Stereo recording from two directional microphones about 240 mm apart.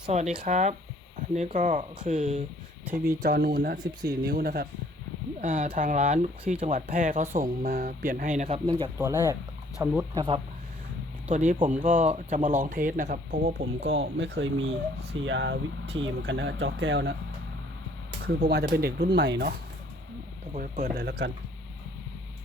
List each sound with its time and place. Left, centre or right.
0.1 s speech: right
2.8 s speech: centre
3.2 s speech: right
8.6 s speech: centre
10.0 s speech: centre
11.3 s speech: right
18.3 s speech: right
20.5 s speech: right
20.8 s speech: right